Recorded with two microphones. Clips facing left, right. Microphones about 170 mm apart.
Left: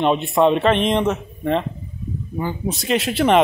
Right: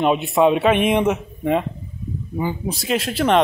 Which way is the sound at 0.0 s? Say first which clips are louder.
Even; 5° right (ahead or behind).